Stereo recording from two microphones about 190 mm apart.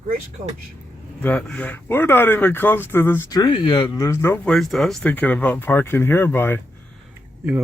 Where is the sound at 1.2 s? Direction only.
5° left (ahead or behind).